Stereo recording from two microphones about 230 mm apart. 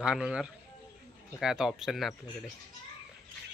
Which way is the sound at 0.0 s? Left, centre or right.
Centre.